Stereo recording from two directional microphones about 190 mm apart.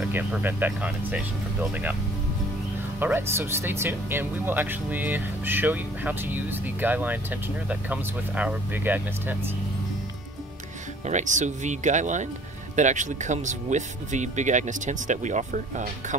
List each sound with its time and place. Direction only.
0.0 s speech: 5° right (ahead or behind)
3.0 s speech: 10° right (ahead or behind)
11.1 s speech: 40° right (ahead or behind)